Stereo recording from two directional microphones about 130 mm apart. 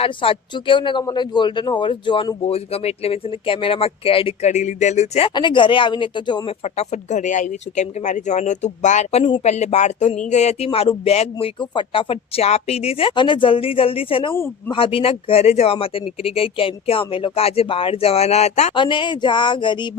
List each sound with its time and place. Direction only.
0.0 s speech: 45° left (ahead or behind)
2.4 s speech: 50° left (ahead or behind)
4.4 s speech: 65° left (ahead or behind)
5.3 s speech: 35° left (ahead or behind)
6.7 s speech: 65° left (ahead or behind)
10.7 s speech: 45° left (ahead or behind)
18.7 s speech: 40° left (ahead or behind)